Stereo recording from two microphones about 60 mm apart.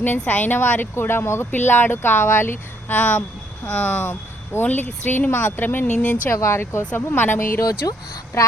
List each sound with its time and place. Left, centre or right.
0.0 s speech: left
5.3 s speech: left
6.3 s speech: left
6.9 s speech: left
7.6 s speech: left